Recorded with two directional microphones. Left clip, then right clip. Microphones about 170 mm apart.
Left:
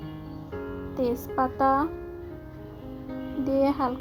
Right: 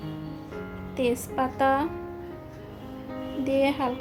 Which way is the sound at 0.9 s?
5° left (ahead or behind).